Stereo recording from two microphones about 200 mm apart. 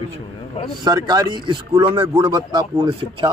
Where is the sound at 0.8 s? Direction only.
20° right (ahead or behind).